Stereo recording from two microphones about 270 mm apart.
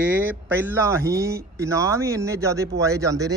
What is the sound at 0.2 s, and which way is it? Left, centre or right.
Speech, centre.